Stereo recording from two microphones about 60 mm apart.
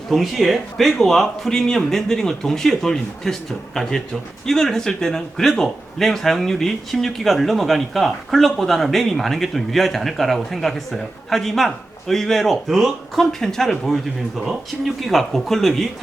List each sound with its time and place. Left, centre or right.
0.1 s speech: centre